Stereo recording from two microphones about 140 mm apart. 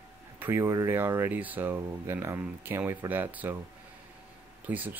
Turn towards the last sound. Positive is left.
turn(degrees=-10)  # may be behind; listen again after turning